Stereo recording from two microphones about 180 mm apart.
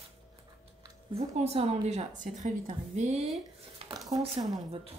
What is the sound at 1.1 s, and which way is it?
Speech, 35° right (ahead or behind).